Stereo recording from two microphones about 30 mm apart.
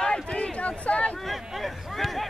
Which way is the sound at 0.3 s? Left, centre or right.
Left.